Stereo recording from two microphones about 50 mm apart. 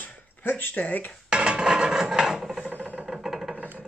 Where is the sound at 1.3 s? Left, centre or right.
Centre.